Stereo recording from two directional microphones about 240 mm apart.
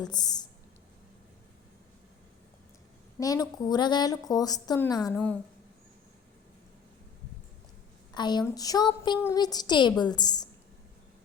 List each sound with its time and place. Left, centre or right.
0.0 s a woman's voice: centre
3.2 s a woman's voice: centre
8.1 s a woman's voice: centre